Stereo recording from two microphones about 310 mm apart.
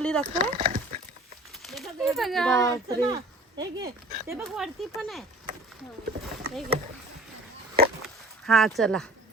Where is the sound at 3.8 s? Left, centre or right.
Right.